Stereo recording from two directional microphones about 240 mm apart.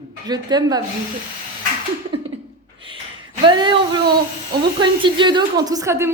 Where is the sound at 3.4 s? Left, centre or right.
Centre.